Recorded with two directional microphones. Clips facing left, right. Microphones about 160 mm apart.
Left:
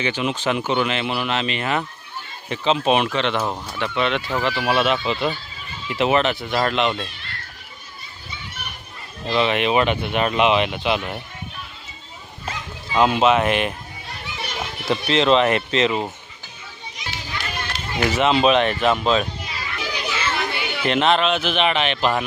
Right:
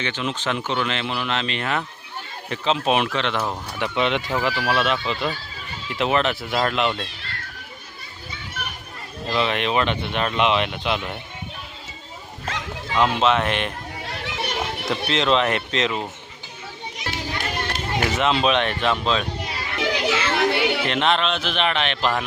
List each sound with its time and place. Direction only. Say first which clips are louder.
0.0 s speech: left 4 dB; 10° left (ahead or behind)
3.8 s speech: even; 15° right (ahead or behind)
4.6 s speech: left 2 dB; 5° left (ahead or behind)
9.3 s speech: left 3 dB; centre (ahead or behind)
12.9 s speech: left 3 dB; 5° left (ahead or behind)
13.9 s children playing: right 4 dB; 90° right; by 14.8 s 60° right (ahead or behind)
15.0 s speech: left 4 dB; centre (ahead or behind)
17.0 s children playing: right 3 dB; 50° right (ahead or behind)
18.1 s speech: left 4 dB; centre (ahead or behind)
19.5 s children playing: right 5 dB; 80° right
20.8 s speech: left 3 dB; centre (ahead or behind)